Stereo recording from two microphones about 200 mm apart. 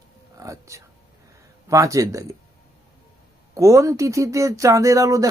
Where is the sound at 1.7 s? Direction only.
15° right (ahead or behind).